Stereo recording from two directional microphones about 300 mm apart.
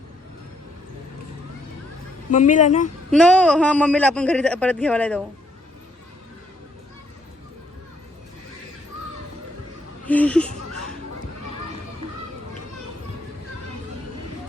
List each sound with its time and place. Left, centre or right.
2.3 s speech: left
3.1 s a man's voice: centre
10.1 s a sound: centre